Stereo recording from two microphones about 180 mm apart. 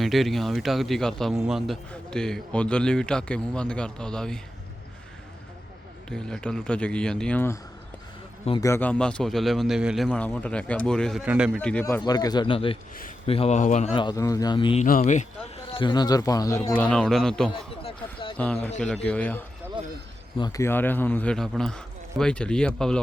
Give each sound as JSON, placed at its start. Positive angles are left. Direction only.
{"t": 0.0, "sound": "a man's voice", "side_deg": 0}
{"t": 6.1, "sound": "a man's voice", "side_deg": 5}
{"t": 8.6, "sound": "a man's voice", "side_deg": 10}
{"t": 11.6, "sound": "a man's voice", "side_deg": 10}
{"t": 12.0, "sound": "speech", "side_deg": 20}
{"t": 13.9, "sound": "speech", "side_deg": 25}
{"t": 14.8, "sound": "speech", "side_deg": 45}
{"t": 15.7, "sound": "a man's voice", "side_deg": 25}
{"t": 17.5, "sound": "a sound", "side_deg": 30}
{"t": 18.3, "sound": "a man's voice", "side_deg": 10}
{"t": 20.4, "sound": "a man's voice", "side_deg": 15}